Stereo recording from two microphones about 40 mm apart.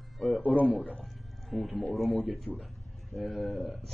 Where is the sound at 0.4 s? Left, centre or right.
Left.